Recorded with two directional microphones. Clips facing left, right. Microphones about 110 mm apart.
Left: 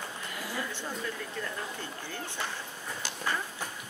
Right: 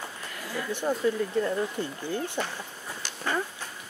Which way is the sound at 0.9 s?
45° right (ahead or behind).